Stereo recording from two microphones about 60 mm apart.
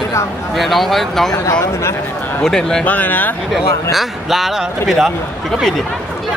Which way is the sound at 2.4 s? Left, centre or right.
Centre.